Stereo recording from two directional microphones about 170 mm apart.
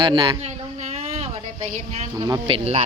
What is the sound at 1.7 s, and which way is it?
Speech, 45° right (ahead or behind).